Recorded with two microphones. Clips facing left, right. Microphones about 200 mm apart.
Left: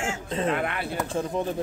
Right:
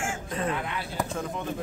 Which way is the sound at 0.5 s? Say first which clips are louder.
Left 4 dB; 60° left (ahead or behind).